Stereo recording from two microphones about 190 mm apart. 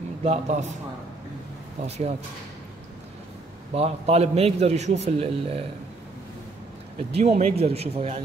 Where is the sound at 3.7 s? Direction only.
35° right (ahead or behind).